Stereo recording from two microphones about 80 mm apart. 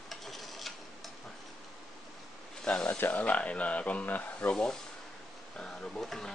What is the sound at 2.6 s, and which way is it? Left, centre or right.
Speech, centre.